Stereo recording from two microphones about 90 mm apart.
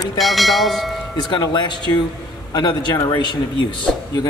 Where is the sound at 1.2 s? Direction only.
50° left (ahead or behind).